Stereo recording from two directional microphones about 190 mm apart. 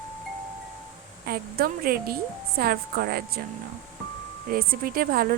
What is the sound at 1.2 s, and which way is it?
A woman's voice, 55° right (ahead or behind).